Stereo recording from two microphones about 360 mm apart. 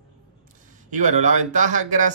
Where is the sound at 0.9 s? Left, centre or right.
Centre.